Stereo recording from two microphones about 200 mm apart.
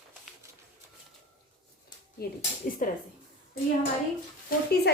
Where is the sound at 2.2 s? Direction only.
50° left (ahead or behind).